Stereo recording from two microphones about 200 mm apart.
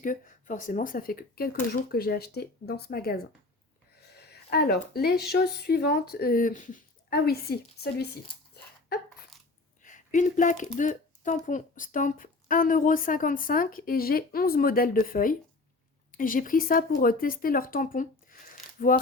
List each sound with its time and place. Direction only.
0.0 s a woman's voice: 40° left (ahead or behind)
4.3 s a woman's voice: 55° left (ahead or behind)
8.9 s a sound: 55° left (ahead or behind)
9.8 s a woman's voice: 40° left (ahead or behind)